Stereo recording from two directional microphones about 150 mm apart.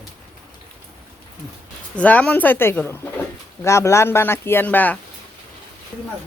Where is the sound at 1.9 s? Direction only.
10° left (ahead or behind).